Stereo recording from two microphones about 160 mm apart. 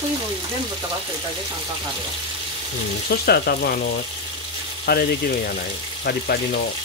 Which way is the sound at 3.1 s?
80° left.